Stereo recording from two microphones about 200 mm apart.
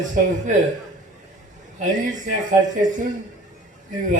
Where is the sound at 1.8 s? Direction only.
40° right (ahead or behind).